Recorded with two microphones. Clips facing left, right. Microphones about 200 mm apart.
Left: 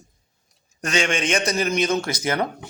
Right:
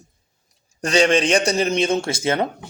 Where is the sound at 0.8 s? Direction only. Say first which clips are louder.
Right 6 dB; 35° right (ahead or behind).